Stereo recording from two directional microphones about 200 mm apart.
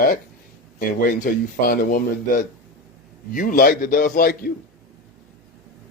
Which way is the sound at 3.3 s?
45° left (ahead or behind).